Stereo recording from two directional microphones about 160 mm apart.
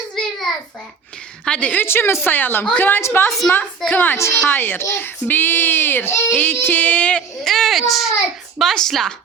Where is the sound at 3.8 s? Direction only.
10° left (ahead or behind).